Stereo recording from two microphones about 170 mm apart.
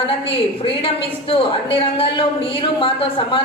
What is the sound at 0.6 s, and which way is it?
Speech, 35° left (ahead or behind).